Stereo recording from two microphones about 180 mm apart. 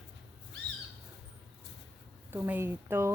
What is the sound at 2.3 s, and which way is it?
Speech, 10° right (ahead or behind).